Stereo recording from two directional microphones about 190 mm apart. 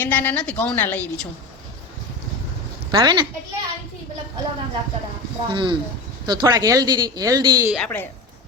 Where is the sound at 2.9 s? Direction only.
25° right (ahead or behind).